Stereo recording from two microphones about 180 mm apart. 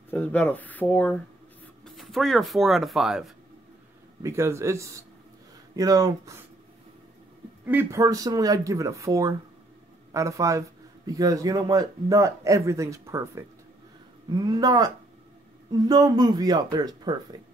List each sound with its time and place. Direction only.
0.1 s speech: 10° left (ahead or behind)
4.2 s speech: 15° right (ahead or behind)
7.6 s speech: 15° right (ahead or behind)